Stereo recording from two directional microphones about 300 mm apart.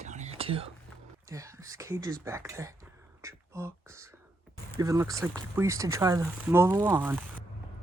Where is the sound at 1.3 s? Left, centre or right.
Centre.